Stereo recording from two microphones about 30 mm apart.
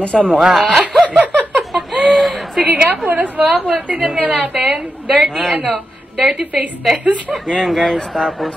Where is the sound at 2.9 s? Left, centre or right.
Right.